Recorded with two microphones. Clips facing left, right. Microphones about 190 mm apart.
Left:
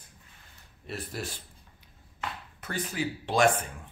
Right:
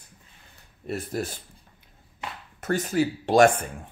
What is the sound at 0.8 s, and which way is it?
Speech, 45° right (ahead or behind).